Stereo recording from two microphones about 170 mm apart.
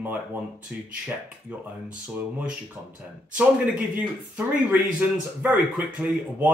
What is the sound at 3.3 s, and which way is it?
Speech, 5° right (ahead or behind).